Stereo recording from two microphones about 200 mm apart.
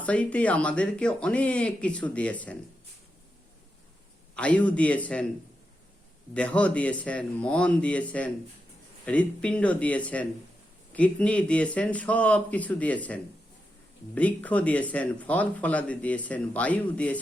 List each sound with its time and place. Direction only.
0.0 s speech: 5° left (ahead or behind)
4.4 s speech: 5° left (ahead or behind)
6.3 s speech: 5° left (ahead or behind)
14.2 s speech: 5° left (ahead or behind)